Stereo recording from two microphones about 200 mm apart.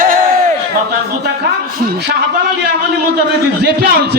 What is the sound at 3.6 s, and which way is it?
Speech, 50° right (ahead or behind).